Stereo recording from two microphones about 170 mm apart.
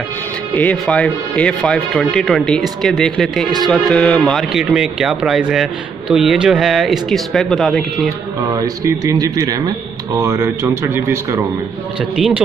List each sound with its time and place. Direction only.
0.6 s speech: 10° left (ahead or behind)
8.5 s a man's voice: 20° right (ahead or behind)